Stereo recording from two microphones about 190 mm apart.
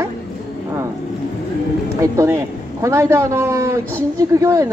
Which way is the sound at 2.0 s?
15° right (ahead or behind).